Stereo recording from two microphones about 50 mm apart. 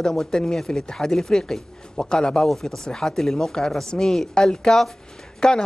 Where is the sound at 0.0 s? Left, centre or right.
Centre.